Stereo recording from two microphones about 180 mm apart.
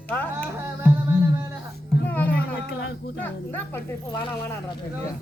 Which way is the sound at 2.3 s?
60° left (ahead or behind).